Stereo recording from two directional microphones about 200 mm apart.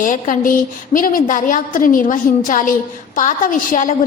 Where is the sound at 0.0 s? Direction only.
40° left (ahead or behind).